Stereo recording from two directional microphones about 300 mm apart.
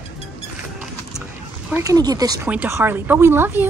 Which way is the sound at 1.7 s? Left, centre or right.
Centre.